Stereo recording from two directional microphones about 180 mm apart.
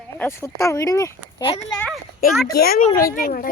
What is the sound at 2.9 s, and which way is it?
Speech, 50° left (ahead or behind).